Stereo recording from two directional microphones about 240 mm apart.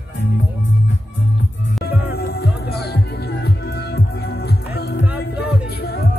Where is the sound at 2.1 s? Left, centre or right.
Left.